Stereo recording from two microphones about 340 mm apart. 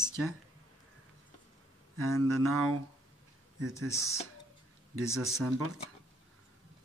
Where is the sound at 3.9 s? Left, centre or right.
Centre.